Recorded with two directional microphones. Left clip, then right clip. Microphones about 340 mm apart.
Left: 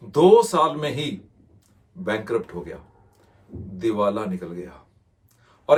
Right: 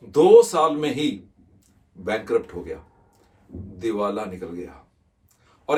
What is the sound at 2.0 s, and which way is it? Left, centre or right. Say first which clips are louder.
Speech: right 2 dB; centre.